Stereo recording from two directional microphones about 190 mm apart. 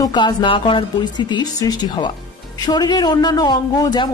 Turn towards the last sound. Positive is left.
turn(degrees=20)  # may be behind; listen again after turning